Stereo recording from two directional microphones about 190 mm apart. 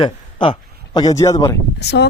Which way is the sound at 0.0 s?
25° left (ahead or behind).